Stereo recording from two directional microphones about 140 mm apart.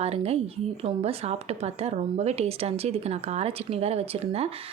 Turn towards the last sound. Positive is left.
turn(degrees=-45)  # may be behind; listen again after turning